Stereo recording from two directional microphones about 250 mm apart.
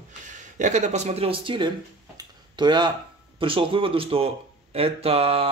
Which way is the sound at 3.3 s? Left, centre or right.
Right.